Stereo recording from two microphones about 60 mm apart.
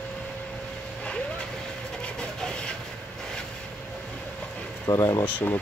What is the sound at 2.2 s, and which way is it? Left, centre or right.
Train, centre.